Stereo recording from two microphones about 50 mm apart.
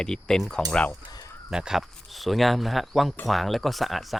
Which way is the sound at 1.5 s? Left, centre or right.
Centre.